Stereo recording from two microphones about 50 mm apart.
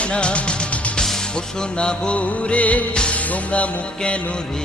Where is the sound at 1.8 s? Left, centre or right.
Centre.